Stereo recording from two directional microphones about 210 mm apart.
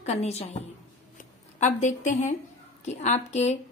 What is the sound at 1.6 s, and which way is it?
A woman's voice, 35° left (ahead or behind).